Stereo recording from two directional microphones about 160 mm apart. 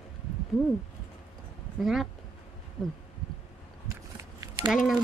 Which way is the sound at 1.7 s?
Centre (ahead or behind).